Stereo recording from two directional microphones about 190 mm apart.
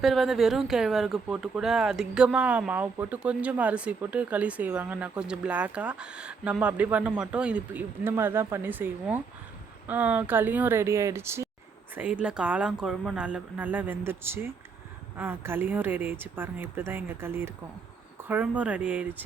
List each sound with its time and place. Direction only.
0.0 s speech: centre (ahead or behind)